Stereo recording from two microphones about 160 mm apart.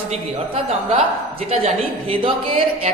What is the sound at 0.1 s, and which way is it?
Speech, 40° right (ahead or behind).